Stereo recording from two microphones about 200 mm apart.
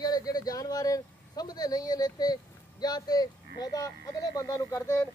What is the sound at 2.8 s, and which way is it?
Speech, 20° left (ahead or behind).